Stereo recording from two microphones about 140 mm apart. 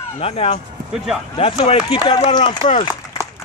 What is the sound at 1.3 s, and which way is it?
Speech, 45° left (ahead or behind).